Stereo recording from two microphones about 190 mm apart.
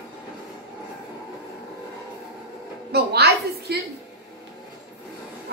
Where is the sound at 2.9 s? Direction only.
55° right (ahead or behind).